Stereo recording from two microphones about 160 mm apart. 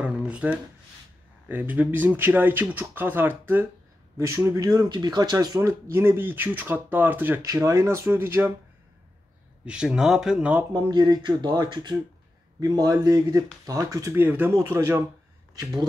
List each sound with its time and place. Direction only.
0.0 s shuffling cards: 5° right (ahead or behind)
1.5 s speech: 10° right (ahead or behind)
9.7 s speech: 5° right (ahead or behind)
10.9 s speech: 25° right (ahead or behind)